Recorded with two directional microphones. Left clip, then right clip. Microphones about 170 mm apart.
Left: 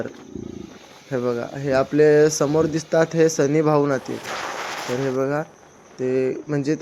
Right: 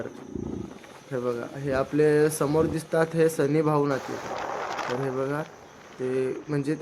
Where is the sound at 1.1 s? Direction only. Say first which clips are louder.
Left 6 dB; 30° left (ahead or behind).